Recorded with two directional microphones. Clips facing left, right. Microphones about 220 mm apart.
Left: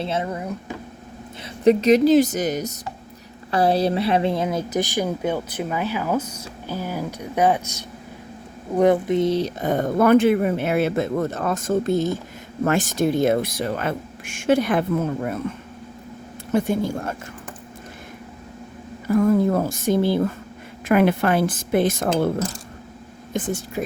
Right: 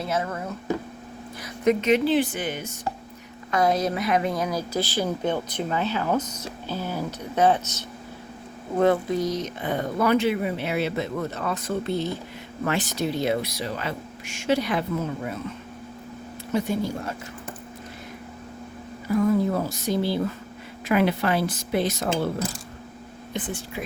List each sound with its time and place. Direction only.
0.0 s speech: 25° left (ahead or behind)
1.6 s a woman's voice: 35° left (ahead or behind)
9.6 s speech: 45° left (ahead or behind)
16.5 s speech: 50° left (ahead or behind)
19.0 s speech: 50° left (ahead or behind)